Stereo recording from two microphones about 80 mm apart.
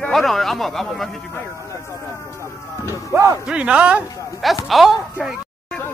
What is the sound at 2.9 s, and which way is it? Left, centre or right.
Music, left.